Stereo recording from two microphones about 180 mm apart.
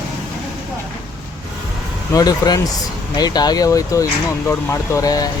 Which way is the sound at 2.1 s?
20° left (ahead or behind).